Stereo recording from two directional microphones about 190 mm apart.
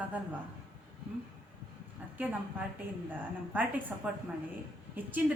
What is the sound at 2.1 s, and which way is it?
Speech, 10° right (ahead or behind).